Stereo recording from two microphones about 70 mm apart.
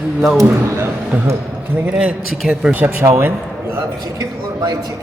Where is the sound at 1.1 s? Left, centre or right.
Right.